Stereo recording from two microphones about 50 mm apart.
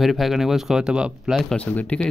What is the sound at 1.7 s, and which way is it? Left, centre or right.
Speech, left.